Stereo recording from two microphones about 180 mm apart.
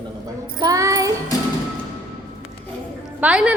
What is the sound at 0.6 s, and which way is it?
Child singing, 20° right (ahead or behind).